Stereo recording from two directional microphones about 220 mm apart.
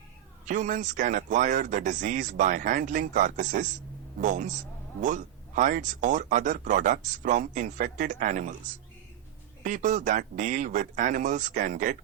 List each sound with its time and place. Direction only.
0.4 s speech: 35° right (ahead or behind)